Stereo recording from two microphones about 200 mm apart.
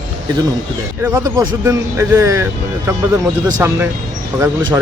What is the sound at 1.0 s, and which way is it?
A man's voice, 15° right (ahead or behind).